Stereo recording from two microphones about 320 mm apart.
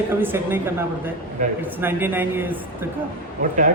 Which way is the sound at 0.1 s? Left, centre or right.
Centre.